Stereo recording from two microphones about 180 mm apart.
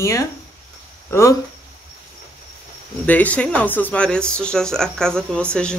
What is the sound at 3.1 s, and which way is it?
Speech, 10° left (ahead or behind).